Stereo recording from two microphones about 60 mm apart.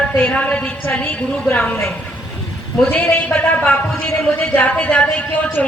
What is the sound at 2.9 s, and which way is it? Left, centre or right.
A man's voice, left.